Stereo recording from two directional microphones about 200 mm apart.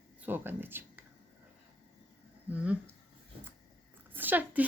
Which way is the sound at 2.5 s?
5° right (ahead or behind).